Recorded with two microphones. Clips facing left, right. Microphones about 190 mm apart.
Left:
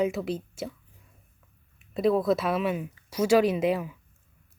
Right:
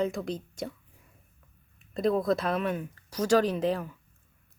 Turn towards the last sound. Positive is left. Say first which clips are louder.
# left 3 dB
turn(degrees=10)  # may be behind; listen again after turning